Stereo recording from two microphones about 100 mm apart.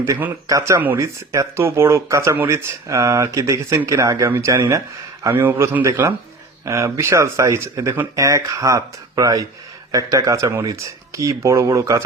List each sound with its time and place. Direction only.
0.0 s a man's voice: 20° right (ahead or behind)
0.4 s a man's voice: 30° right (ahead or behind)